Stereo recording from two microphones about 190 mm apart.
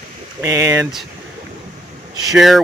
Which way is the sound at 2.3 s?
Centre (ahead or behind).